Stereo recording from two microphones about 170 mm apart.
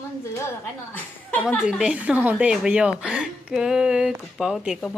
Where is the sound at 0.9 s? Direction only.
10° left (ahead or behind).